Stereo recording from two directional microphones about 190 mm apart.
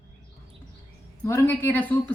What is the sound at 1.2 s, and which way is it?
Speech, 10° left (ahead or behind).